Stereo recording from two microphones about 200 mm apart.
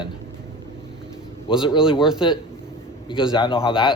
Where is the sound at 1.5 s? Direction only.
25° left (ahead or behind).